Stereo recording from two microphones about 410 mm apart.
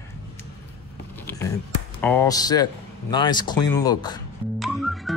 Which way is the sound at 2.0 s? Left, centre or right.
Centre.